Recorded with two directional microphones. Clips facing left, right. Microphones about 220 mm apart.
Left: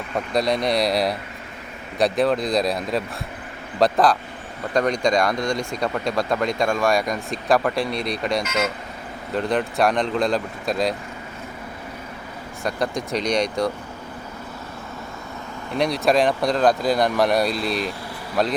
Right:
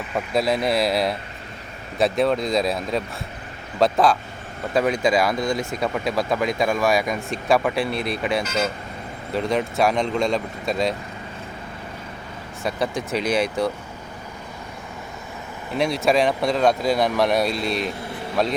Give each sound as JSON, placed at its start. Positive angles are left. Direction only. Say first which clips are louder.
{"t": 0.1, "sound": "speech", "louder": "even", "side_deg": -5}
{"t": 8.4, "sound": "speech", "louder": "even", "side_deg": -30}
{"t": 9.3, "sound": "speech", "louder": "even", "side_deg": 0}
{"t": 12.6, "sound": "speech", "louder": "even", "side_deg": 0}
{"t": 15.8, "sound": "speech", "louder": "even", "side_deg": 0}